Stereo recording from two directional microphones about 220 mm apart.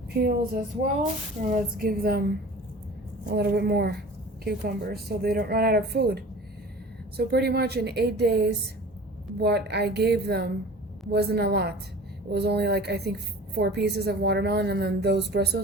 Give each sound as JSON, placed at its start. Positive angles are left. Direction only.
{"t": 0.1, "sound": "a woman's voice", "side_deg": -45}
{"t": 1.4, "sound": "a sound", "side_deg": -35}
{"t": 1.8, "sound": "a woman's voice", "side_deg": -40}
{"t": 3.2, "sound": "a woman's voice", "side_deg": -50}